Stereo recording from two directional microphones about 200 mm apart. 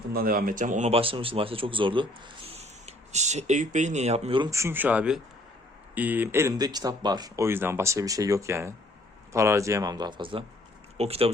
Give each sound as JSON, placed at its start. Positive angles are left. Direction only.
{"t": 0.1, "sound": "speech", "side_deg": -50}
{"t": 4.4, "sound": "speech", "side_deg": -15}